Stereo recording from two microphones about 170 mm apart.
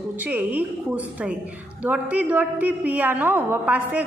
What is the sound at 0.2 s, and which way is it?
A woman's voice, 10° right (ahead or behind).